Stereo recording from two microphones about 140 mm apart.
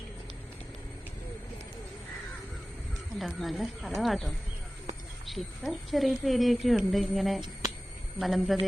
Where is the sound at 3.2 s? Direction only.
Centre (ahead or behind).